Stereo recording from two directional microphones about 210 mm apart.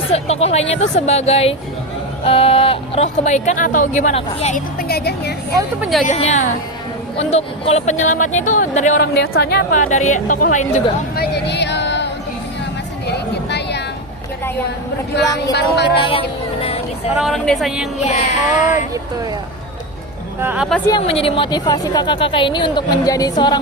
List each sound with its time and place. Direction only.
0.1 s a woman's voice: 30° left (ahead or behind)
4.8 s speech: 50° left (ahead or behind)
6.1 s speech: 30° left (ahead or behind)
9.0 s speech: 50° left (ahead or behind)
11.1 s music: 50° left (ahead or behind)
13.1 s a sound: 50° left (ahead or behind)
15.5 s speech: 50° left (ahead or behind)
16.0 s a woman's voice: 25° left (ahead or behind)
16.6 s music: 30° left (ahead or behind)
17.2 s a woman's voice: centre (ahead or behind)
18.0 s speech: 35° left (ahead or behind)
20.4 s speech: 5° right (ahead or behind)
20.9 s a woman's voice: 25° left (ahead or behind)